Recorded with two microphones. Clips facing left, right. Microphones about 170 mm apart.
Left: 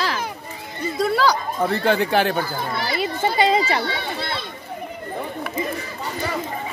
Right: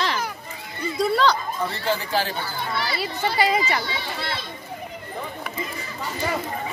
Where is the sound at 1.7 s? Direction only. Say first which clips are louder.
Left 8 dB; 60° left (ahead or behind).